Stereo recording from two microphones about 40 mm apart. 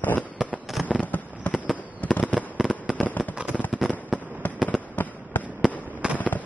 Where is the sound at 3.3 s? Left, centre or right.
Right.